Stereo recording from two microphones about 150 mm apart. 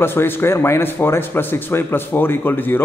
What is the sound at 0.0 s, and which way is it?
Speech, 15° left (ahead or behind).